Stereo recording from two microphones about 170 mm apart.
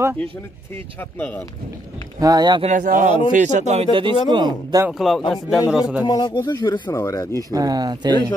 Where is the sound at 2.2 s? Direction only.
25° right (ahead or behind).